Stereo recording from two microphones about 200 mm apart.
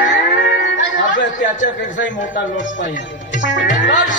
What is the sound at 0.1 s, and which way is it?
Music, 60° left (ahead or behind).